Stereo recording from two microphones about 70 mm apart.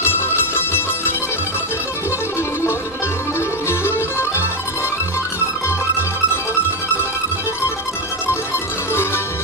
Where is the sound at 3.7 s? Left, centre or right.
Left.